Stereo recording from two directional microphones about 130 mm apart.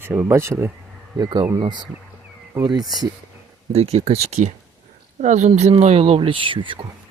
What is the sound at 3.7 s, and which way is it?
Speech, 50° right (ahead or behind).